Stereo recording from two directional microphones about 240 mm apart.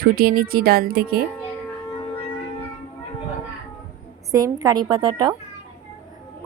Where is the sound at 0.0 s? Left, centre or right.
Right.